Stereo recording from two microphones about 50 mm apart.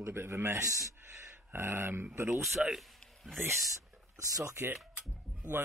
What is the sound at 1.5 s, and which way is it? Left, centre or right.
Speech, right.